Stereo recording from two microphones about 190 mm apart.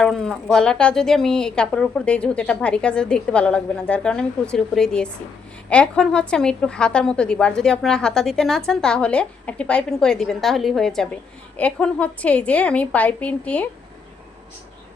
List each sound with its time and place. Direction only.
0.0 s a woman's voice: 5° left (ahead or behind)